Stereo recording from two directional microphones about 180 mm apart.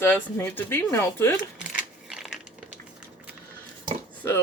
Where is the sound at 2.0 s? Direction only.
Centre (ahead or behind).